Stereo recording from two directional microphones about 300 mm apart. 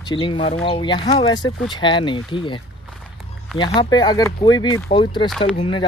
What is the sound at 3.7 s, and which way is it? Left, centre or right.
Speech, centre.